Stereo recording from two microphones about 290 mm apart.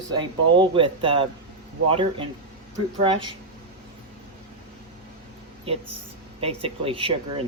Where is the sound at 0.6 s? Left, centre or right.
Centre.